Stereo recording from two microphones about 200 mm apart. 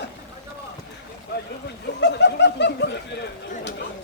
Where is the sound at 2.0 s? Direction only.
60° left (ahead or behind).